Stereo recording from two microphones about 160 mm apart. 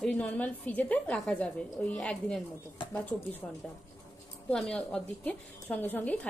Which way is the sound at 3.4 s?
10° left (ahead or behind).